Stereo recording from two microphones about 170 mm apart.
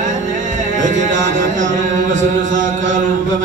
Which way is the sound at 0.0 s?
50° right (ahead or behind).